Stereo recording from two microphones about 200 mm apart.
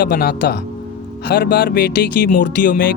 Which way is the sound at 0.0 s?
50° left (ahead or behind).